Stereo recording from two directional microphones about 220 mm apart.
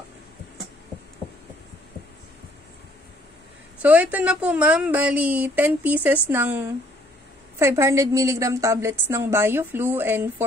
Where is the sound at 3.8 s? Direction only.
5° right (ahead or behind).